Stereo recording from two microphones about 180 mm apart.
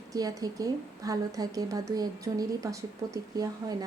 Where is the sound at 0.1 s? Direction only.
20° right (ahead or behind).